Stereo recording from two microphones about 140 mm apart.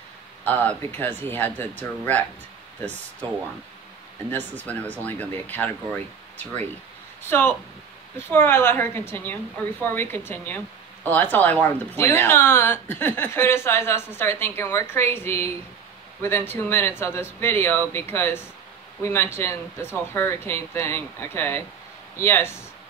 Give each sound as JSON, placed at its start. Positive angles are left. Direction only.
{"t": 0.5, "sound": "a woman's voice", "side_deg": 15}
{"t": 4.3, "sound": "a woman's voice", "side_deg": 10}